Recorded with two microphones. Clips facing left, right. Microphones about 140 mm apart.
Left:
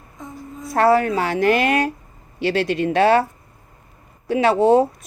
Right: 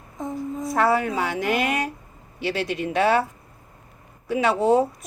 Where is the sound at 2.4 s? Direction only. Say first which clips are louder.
Left 6 dB; 75° left (ahead or behind).